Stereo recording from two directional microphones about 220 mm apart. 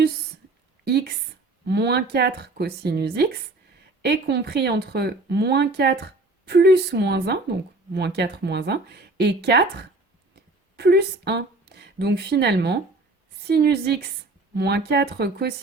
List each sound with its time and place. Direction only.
0.9 s speech: 50° right (ahead or behind)
10.3 s a sound: 45° right (ahead or behind)
13.4 s speech: 45° right (ahead or behind)